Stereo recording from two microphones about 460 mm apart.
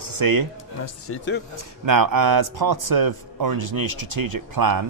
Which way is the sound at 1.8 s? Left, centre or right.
Right.